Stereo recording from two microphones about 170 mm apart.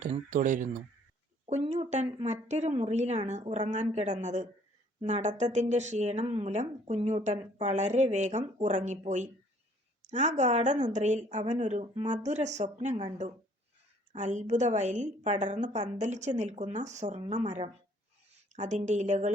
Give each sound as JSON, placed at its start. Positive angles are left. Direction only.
{"t": 0.0, "sound": "speech", "side_deg": -50}
{"t": 1.5, "sound": "a sound", "side_deg": -40}
{"t": 2.2, "sound": "speech", "side_deg": -45}
{"t": 14.1, "sound": "speech", "side_deg": -45}